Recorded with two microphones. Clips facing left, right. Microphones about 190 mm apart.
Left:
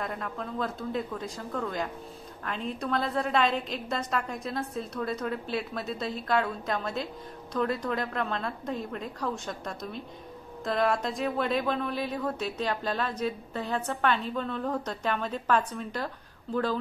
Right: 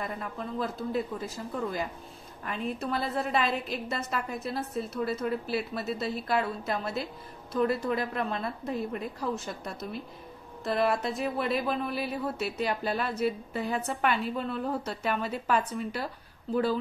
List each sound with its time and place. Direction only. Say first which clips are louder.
0.0 s a woman's voice: left 1 dB; 5° right (ahead or behind)